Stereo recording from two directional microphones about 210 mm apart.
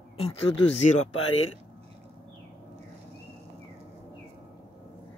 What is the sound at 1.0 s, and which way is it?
Speech, 75° left (ahead or behind).